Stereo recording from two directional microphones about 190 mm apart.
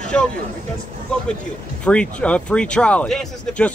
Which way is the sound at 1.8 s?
5° left (ahead or behind).